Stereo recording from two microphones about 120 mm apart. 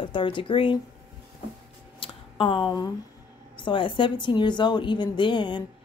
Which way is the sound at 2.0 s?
45° left (ahead or behind).